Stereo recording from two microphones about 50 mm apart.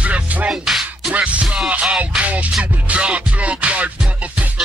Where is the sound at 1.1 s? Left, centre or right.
Right.